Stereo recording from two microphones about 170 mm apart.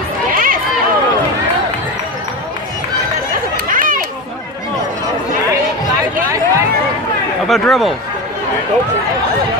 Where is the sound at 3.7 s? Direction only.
55° right (ahead or behind).